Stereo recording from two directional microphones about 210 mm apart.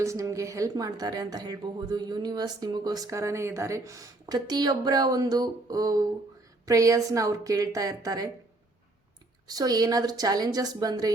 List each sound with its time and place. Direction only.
0.0 s a woman's voice: 15° right (ahead or behind)
9.5 s a woman's voice: 20° right (ahead or behind)